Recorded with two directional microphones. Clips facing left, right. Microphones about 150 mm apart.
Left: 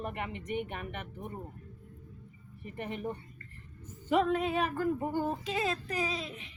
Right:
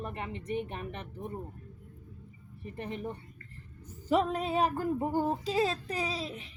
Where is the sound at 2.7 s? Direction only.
30° right (ahead or behind).